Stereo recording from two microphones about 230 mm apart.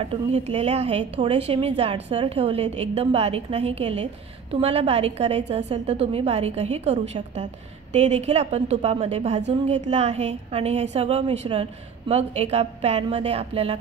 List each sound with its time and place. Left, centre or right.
0.0 s a woman's voice: right